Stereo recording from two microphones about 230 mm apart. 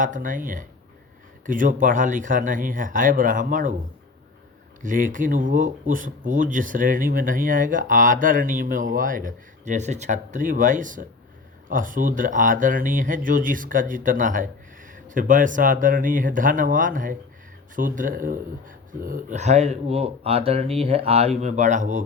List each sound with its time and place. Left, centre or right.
0.0 s speech: right
4.8 s speech: right